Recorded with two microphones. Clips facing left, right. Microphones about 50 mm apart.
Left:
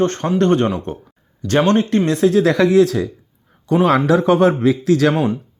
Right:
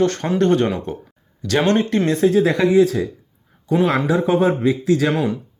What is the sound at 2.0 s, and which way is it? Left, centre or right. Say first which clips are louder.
Speech: even; left.